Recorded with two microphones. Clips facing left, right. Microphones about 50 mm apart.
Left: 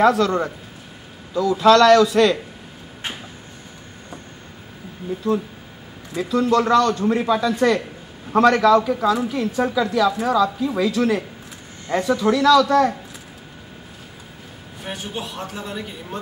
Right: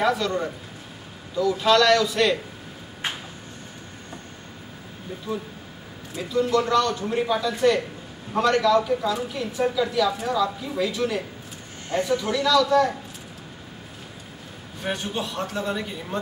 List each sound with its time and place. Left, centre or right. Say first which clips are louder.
0.0 s a man's voice: left 6 dB; left
5.2 s a man's voice: left 9 dB; left
12.2 s a man's voice: left 9 dB; left
14.9 s a man's voice: right 2 dB; centre